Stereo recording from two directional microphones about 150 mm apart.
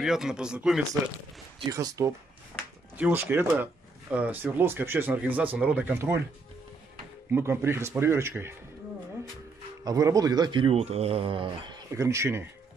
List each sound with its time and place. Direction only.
0.0 s speech: 5° right (ahead or behind)
1.7 s speech: 20° right (ahead or behind)
7.3 s speech: 15° right (ahead or behind)
9.8 s speech: 25° right (ahead or behind)
11.9 s speech: 20° right (ahead or behind)